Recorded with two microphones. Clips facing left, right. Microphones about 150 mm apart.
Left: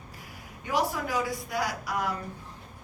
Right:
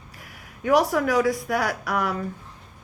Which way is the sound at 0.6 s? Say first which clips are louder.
Right 9 dB; 70° right (ahead or behind).